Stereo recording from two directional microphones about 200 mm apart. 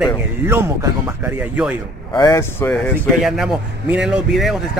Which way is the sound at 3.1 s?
Centre (ahead or behind).